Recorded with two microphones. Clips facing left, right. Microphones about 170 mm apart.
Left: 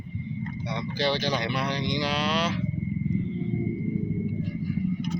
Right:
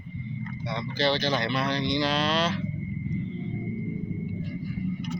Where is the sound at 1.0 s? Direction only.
15° left (ahead or behind).